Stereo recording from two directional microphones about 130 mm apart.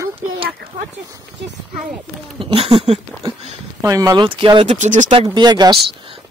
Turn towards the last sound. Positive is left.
turn(degrees=-35)  # may be behind; listen again after turning